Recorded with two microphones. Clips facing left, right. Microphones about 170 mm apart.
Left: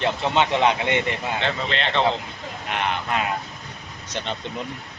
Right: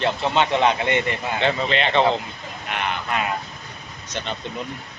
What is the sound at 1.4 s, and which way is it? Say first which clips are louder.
Speech: right 8 dB; 10° right (ahead or behind).